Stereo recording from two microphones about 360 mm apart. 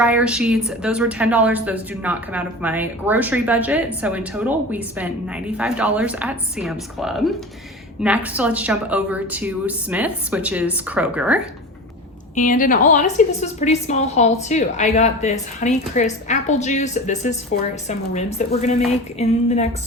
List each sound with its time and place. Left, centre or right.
0.0 s a woman's voice: centre
12.3 s a woman's voice: left
18.9 s a sound: centre